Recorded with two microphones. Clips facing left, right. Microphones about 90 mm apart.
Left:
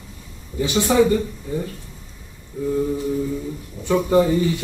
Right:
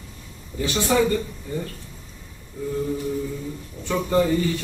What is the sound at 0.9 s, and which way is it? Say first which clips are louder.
Speech: left 4 dB; 15° left (ahead or behind).